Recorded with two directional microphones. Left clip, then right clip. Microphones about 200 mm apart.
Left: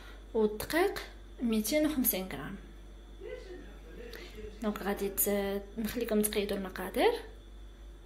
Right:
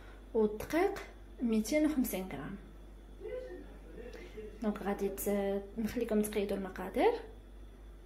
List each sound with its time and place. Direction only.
0.3 s a woman's voice: centre (ahead or behind)
4.6 s a woman's voice: centre (ahead or behind)